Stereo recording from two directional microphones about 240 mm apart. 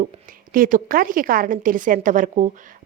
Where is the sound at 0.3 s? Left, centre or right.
Right.